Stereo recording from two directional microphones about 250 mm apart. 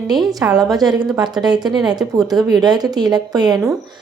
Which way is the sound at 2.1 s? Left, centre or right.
Centre.